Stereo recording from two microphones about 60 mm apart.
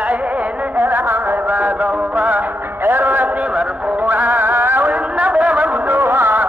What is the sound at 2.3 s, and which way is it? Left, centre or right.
Music, right.